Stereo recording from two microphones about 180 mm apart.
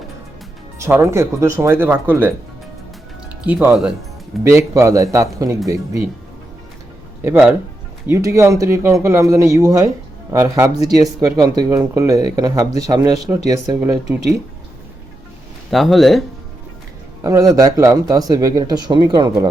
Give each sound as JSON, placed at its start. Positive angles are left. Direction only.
{"t": 0.8, "sound": "speech", "side_deg": -15}
{"t": 3.4, "sound": "speech", "side_deg": -10}
{"t": 7.3, "sound": "speech", "side_deg": -10}
{"t": 15.7, "sound": "speech", "side_deg": 0}
{"t": 17.2, "sound": "speech", "side_deg": -20}